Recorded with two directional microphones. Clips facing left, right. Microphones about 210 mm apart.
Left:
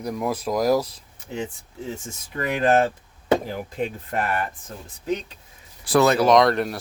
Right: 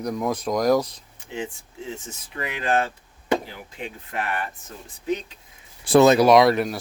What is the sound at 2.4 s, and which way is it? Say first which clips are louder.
Speech: left 5 dB; 45° left (ahead or behind).